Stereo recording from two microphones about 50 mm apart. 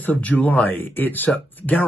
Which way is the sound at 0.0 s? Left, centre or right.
Left.